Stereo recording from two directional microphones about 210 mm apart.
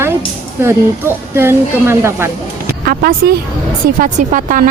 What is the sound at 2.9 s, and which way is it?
A woman's voice, 45° right (ahead or behind).